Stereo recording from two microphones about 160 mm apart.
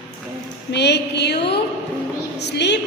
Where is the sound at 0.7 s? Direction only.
90° left.